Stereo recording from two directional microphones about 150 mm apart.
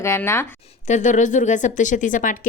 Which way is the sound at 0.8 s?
55° left (ahead or behind).